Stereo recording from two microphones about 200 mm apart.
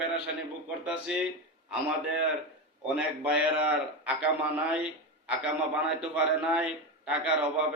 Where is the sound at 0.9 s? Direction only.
5° right (ahead or behind).